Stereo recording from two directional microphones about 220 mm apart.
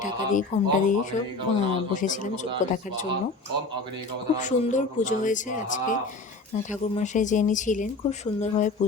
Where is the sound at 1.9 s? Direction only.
35° left (ahead or behind).